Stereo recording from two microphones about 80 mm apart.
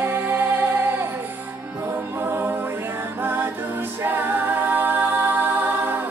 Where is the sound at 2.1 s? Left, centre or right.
Right.